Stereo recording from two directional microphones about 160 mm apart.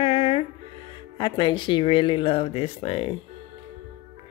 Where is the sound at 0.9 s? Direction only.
30° left (ahead or behind).